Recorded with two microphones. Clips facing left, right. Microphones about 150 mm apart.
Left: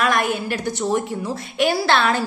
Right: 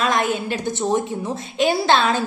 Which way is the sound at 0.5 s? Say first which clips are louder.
Right 1 dB; 20° right (ahead or behind).